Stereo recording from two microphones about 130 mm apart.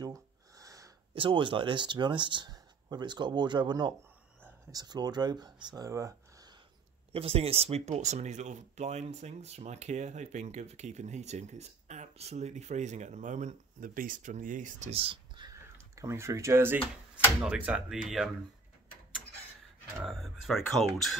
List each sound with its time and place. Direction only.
0.0 s a sound: 25° right (ahead or behind)
1.1 s speech: 40° right (ahead or behind)
7.1 s speech: 50° right (ahead or behind)
15.5 s a sound: 25° right (ahead or behind)
17.5 s speech: 5° right (ahead or behind)
20.1 s speech: centre (ahead or behind)